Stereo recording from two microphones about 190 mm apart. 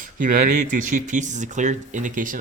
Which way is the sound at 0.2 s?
45° right (ahead or behind).